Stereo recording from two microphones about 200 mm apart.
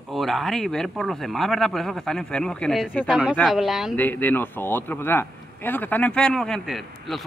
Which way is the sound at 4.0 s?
10° left (ahead or behind).